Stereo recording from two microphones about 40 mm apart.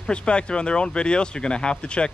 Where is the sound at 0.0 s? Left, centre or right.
Left.